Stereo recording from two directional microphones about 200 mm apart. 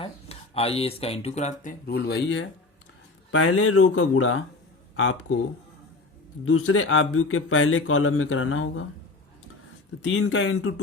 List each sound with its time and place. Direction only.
0.0 s speech: 30° left (ahead or behind)
1.9 s speech: 50° left (ahead or behind)
3.3 s speech: 90° left
6.4 s speech: 90° left
10.0 s speech: 70° left (ahead or behind)